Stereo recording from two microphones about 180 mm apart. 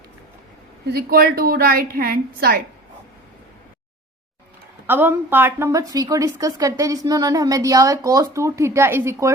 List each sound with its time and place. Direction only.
0.9 s a woman's voice: 55° right (ahead or behind)
4.9 s a woman's voice: 10° right (ahead or behind)